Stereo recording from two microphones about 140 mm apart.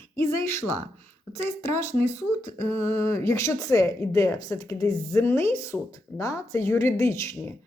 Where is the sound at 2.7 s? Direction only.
45° right (ahead or behind).